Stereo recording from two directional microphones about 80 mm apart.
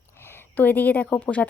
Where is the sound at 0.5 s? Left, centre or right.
Left.